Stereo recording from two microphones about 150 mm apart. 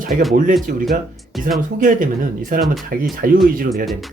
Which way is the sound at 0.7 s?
70° right (ahead or behind).